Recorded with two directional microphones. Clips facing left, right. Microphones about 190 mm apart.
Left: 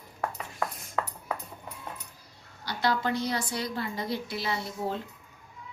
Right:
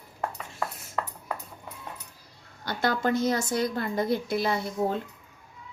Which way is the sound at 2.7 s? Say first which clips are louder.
Right 2 dB; 50° right (ahead or behind).